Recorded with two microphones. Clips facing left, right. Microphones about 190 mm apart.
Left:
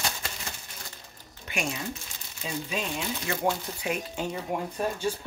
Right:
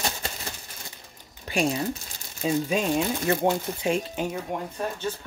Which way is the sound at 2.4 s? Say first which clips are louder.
Right 8 dB; 45° right (ahead or behind).